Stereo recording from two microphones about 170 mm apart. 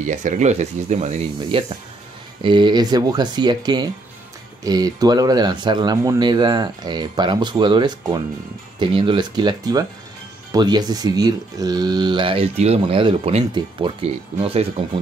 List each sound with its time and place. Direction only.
0.0 s speech: 45° right (ahead or behind)